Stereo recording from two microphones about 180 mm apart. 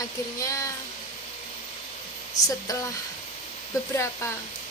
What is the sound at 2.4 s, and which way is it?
Speech, 40° left (ahead or behind).